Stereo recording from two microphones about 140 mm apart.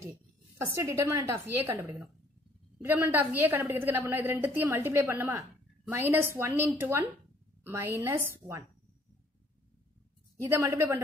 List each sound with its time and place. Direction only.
0.7 s a woman's voice: 20° right (ahead or behind)
10.4 s a woman's voice: 20° right (ahead or behind)